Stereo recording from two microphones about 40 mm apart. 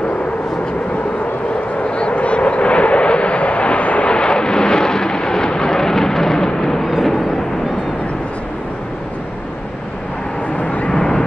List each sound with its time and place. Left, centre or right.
1.8 s vehicle: left
4.1 s vehicle: left
10.6 s vehicle: left
10.9 s vehicle: centre